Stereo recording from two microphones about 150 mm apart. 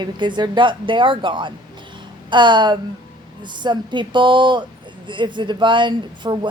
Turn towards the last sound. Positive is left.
turn(degrees=-30)  # may be behind; listen again after turning